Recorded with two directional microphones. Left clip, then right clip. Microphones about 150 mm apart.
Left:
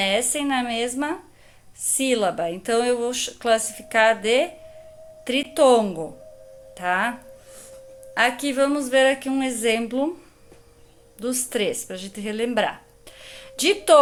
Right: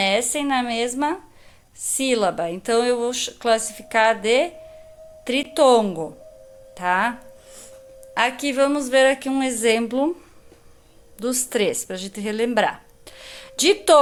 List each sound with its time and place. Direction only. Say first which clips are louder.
0.0 s speech: right 2 dB; 20° right (ahead or behind)
6.7 s music: right 2 dB; 20° right (ahead or behind)
8.1 s speech: even; 20° right (ahead or behind)
11.2 s a woman's voice: right 3 dB; 30° right (ahead or behind)